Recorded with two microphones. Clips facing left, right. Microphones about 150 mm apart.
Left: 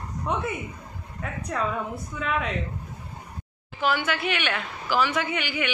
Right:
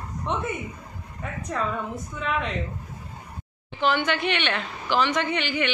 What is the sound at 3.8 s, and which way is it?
A woman's voice, 5° left (ahead or behind).